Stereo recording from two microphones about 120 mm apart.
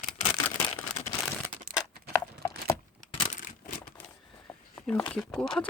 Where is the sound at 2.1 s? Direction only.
25° left (ahead or behind).